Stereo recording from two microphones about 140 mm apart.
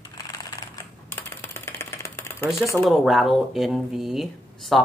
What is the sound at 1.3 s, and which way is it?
Typewriter, 15° left (ahead or behind).